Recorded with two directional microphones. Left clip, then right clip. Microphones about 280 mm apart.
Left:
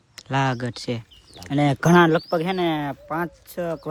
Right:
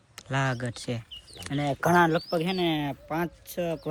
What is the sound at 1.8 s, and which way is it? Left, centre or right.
Speech, left.